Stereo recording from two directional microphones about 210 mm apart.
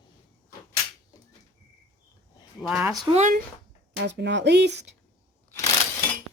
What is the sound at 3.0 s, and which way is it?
Speech, 30° right (ahead or behind).